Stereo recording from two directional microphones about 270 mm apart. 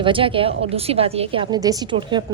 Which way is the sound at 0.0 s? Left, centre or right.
Centre.